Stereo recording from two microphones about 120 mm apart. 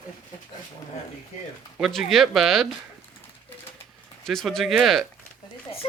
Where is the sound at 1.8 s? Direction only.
Centre (ahead or behind).